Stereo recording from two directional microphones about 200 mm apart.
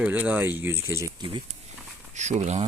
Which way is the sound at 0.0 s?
10° right (ahead or behind).